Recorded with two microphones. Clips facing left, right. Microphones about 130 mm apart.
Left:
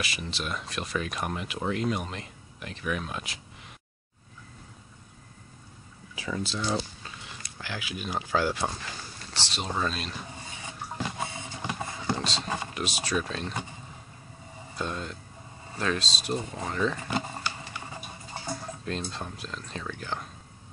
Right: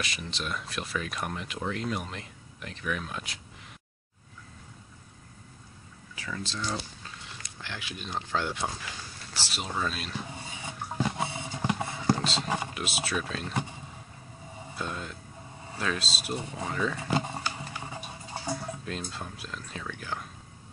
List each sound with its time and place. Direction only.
0.0 s speech: 5° left (ahead or behind)
6.1 s speech: 15° left (ahead or behind); by 10.1 s 5° right (ahead or behind)
11.3 s a sound: 10° right (ahead or behind)
12.7 s speech: 5° right (ahead or behind)
14.8 s speech: 5° right (ahead or behind)
17.1 s a sound: 15° right (ahead or behind)
18.3 s speech: 10° right (ahead or behind)